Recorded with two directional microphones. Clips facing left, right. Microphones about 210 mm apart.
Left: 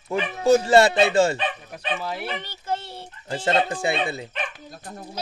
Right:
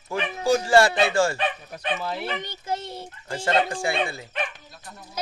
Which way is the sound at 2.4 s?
15° right (ahead or behind).